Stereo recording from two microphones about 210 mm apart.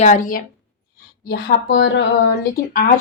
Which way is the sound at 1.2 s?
50° left (ahead or behind).